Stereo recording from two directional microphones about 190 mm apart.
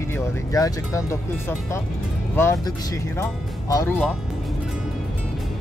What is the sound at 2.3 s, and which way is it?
Speech, 15° left (ahead or behind).